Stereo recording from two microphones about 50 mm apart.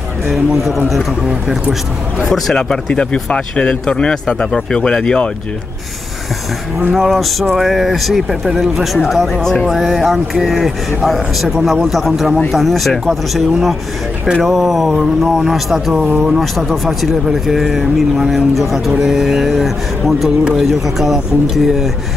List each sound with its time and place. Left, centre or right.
0.3 s speech: centre
2.5 s speech: centre
6.9 s speech: centre
9.0 s speech: centre
9.7 s speech: centre
15.4 s speech: centre
16.3 s speech: centre